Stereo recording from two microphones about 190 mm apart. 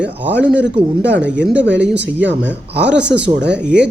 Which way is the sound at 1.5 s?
70° right (ahead or behind).